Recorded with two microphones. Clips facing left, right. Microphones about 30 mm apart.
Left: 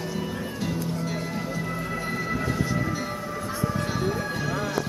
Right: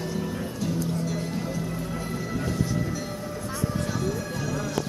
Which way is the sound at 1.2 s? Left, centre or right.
Centre.